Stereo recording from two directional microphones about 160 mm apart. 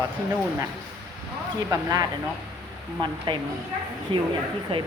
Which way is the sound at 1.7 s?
20° right (ahead or behind).